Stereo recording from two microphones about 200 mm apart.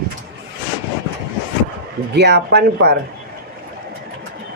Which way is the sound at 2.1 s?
60° right (ahead or behind).